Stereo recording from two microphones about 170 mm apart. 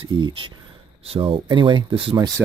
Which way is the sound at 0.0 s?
30° right (ahead or behind).